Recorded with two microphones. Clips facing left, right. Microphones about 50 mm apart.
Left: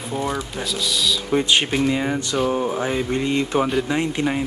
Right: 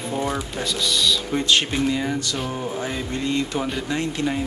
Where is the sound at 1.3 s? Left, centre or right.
Centre.